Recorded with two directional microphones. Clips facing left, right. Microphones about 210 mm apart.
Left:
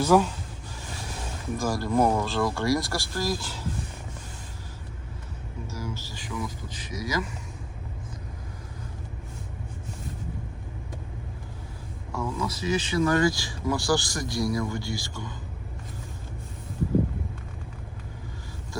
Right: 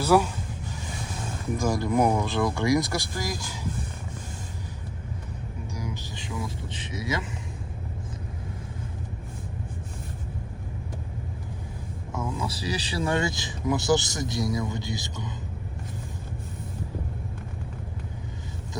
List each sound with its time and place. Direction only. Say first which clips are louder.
0.0 s speech: left 1 dB; 10° right (ahead or behind)
1.7 s speech: even; 15° right (ahead or behind)
5.7 s vehicle: even; 15° right (ahead or behind)
12.1 s speech: left 1 dB; 25° right (ahead or behind)